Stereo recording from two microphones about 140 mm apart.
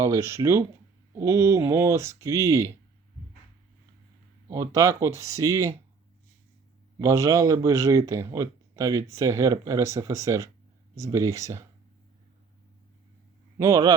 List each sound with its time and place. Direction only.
0.0 s speech: 20° right (ahead or behind)
4.4 s speech: 20° right (ahead or behind)
7.0 s speech: 20° right (ahead or behind)
13.6 s speech: 25° right (ahead or behind)